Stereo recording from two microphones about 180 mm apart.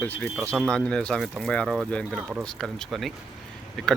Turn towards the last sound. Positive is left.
turn(degrees=0)  # may be behind; listen again after turning